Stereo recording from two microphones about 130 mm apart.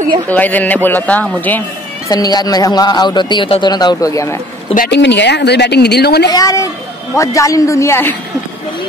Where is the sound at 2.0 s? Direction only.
30° left (ahead or behind).